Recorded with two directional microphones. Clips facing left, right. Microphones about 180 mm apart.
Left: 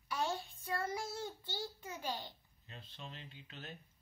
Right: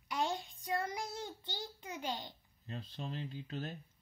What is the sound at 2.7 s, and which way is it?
Speech, 40° right (ahead or behind).